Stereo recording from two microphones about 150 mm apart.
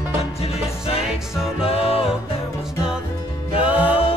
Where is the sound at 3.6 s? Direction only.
10° right (ahead or behind).